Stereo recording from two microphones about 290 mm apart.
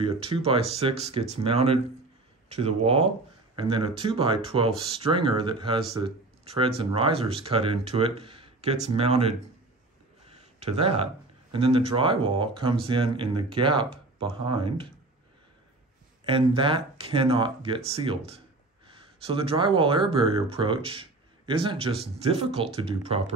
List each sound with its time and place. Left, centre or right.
0.0 s speech: centre
10.2 s a sound: centre
11.5 s speech: centre
16.3 s speech: centre